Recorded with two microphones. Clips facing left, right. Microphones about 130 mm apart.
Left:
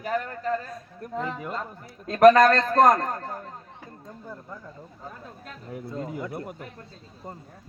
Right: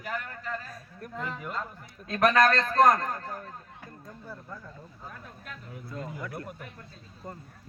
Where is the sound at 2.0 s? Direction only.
45° left (ahead or behind).